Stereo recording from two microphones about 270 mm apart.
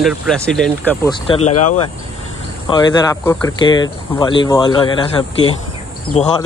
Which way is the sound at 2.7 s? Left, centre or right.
Centre.